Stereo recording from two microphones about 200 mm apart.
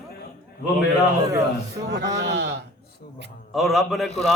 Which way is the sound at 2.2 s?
60° right (ahead or behind).